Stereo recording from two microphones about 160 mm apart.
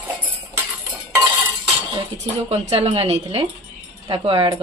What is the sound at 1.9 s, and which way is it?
Speech, 40° right (ahead or behind).